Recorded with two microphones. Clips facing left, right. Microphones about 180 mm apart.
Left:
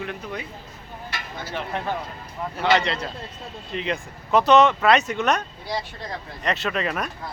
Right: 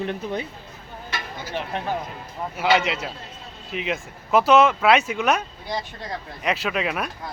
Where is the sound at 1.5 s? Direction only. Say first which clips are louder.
Right 1 dB; 10° right (ahead or behind).